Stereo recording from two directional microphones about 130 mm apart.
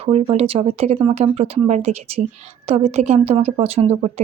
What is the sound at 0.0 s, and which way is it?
Speech, 50° right (ahead or behind).